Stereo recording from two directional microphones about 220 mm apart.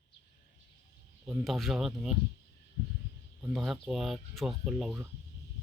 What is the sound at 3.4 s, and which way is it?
Speech, centre (ahead or behind).